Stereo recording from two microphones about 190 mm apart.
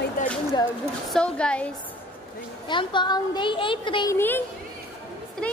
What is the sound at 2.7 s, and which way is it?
A woman's voice, 25° left (ahead or behind).